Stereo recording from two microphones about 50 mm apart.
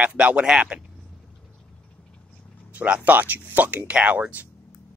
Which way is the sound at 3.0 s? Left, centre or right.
Right.